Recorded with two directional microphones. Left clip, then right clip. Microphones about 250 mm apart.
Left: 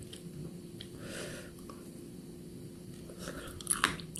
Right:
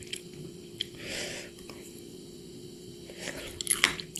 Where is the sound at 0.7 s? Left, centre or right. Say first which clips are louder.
Right 9 dB; centre.